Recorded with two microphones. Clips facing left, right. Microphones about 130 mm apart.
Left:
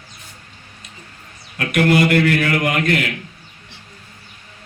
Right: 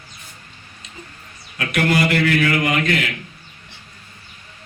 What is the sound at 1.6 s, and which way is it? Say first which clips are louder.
Music: left 3 dB; 50° left (ahead or behind).